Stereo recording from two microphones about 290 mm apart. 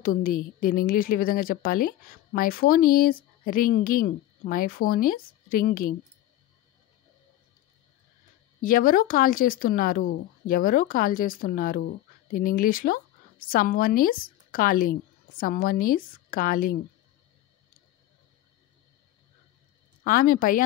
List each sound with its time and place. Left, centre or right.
0.0 s a woman's voice: left
8.5 s a woman's voice: left
20.0 s a woman's voice: left